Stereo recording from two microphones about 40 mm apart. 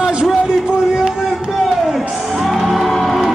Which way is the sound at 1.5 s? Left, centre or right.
Centre.